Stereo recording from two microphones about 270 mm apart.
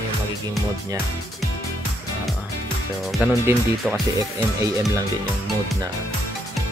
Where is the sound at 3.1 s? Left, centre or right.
Centre.